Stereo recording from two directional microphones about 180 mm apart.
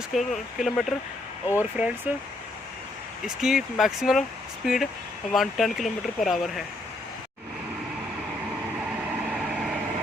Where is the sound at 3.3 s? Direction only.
Centre (ahead or behind).